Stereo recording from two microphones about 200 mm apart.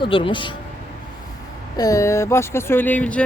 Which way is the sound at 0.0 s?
25° left (ahead or behind).